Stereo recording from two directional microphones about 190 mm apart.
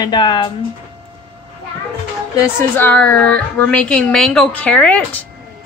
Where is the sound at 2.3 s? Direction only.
10° left (ahead or behind).